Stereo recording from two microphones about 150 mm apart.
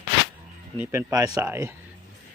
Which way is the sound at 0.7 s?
20° right (ahead or behind).